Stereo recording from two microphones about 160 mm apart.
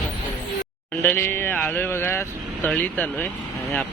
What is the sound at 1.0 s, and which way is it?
Speech, 15° left (ahead or behind).